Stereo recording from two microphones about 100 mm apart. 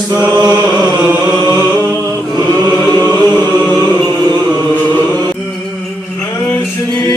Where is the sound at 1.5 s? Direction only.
20° left (ahead or behind).